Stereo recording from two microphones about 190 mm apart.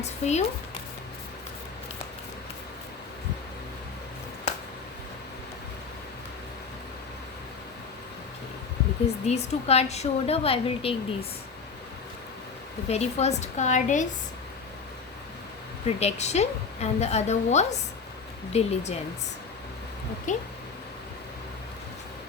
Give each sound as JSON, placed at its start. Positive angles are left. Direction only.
{"t": 0.0, "sound": "speech", "side_deg": 35}
{"t": 9.2, "sound": "a woman's voice", "side_deg": 35}
{"t": 12.9, "sound": "a woman's voice", "side_deg": 35}
{"t": 16.0, "sound": "a woman's voice", "side_deg": 35}
{"t": 20.3, "sound": "a woman's voice", "side_deg": 40}